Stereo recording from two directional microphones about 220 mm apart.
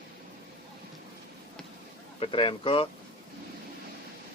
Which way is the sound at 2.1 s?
25° left (ahead or behind).